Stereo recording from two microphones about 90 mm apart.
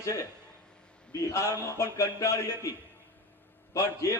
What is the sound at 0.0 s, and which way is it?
Speech, 40° left (ahead or behind).